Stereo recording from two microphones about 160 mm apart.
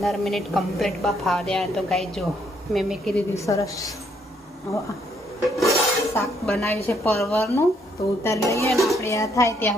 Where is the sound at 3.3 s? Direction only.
20° left (ahead or behind).